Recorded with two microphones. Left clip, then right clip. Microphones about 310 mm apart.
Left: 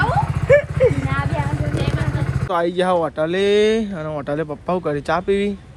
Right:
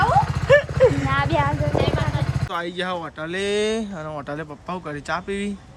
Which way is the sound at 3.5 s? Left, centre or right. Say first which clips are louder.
Left 5 dB; centre.